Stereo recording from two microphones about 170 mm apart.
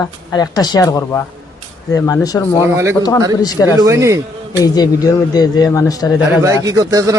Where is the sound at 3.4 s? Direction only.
20° left (ahead or behind).